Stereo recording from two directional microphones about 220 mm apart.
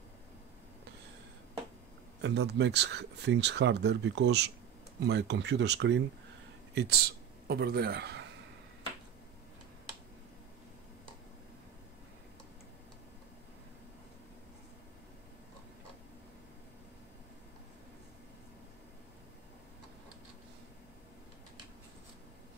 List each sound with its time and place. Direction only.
2.2 s speech: 50° right (ahead or behind)